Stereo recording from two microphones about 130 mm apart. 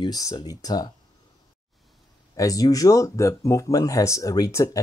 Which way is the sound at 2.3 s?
25° left (ahead or behind).